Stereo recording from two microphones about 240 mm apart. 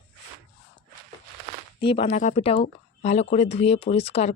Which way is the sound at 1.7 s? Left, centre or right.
Left.